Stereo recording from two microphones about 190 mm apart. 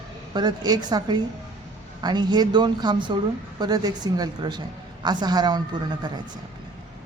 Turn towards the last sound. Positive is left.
turn(degrees=-20)  # may be behind; listen again after turning